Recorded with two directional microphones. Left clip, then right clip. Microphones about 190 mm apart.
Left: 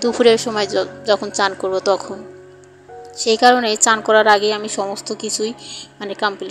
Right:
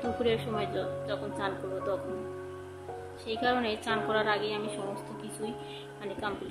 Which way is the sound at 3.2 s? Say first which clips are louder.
Left 17 dB; 45° left (ahead or behind).